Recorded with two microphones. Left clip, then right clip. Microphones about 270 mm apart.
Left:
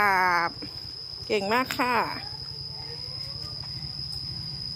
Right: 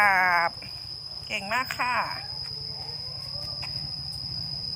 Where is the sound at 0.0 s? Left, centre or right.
Centre.